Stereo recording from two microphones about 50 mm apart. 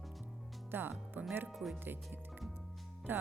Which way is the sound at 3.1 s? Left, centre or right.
Right.